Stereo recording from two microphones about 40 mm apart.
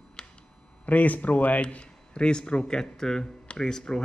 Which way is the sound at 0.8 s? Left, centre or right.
Left.